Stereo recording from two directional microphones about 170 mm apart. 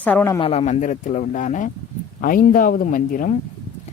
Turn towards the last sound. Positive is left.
turn(degrees=55)  # may be behind; listen again after turning